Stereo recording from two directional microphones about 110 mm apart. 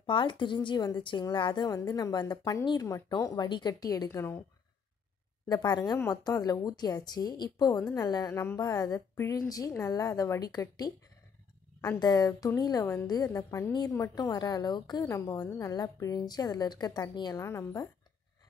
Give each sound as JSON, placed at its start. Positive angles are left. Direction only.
{"t": 0.0, "sound": "speech", "side_deg": 50}
{"t": 4.1, "sound": "speech", "side_deg": 25}
{"t": 5.5, "sound": "speech", "side_deg": 40}
{"t": 8.3, "sound": "speech", "side_deg": 20}
{"t": 8.5, "sound": "speech", "side_deg": 35}
{"t": 12.0, "sound": "speech", "side_deg": 35}
{"t": 17.4, "sound": "speech", "side_deg": 25}